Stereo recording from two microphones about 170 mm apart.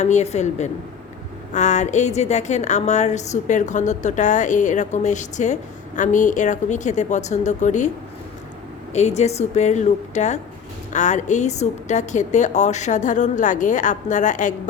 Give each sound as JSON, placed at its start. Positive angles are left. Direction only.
{"t": 0.0, "sound": "a woman's voice", "side_deg": 40}
{"t": 8.9, "sound": "a woman's voice", "side_deg": 40}